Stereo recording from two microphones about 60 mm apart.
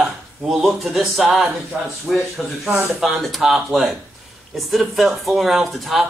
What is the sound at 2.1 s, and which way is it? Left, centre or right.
A man's voice, centre.